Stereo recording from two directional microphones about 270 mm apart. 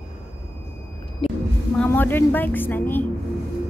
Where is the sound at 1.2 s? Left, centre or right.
Left.